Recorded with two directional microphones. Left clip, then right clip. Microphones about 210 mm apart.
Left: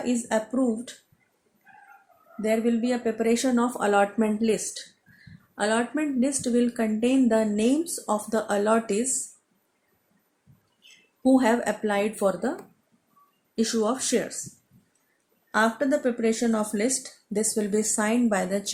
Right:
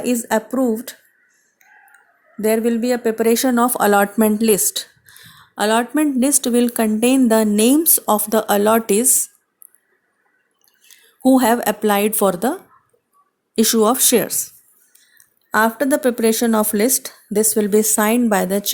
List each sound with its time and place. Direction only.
0.0 s speech: 55° right (ahead or behind)
2.4 s speech: 50° right (ahead or behind)
11.2 s speech: 50° right (ahead or behind)
13.6 s speech: 55° right (ahead or behind)
15.5 s speech: 50° right (ahead or behind)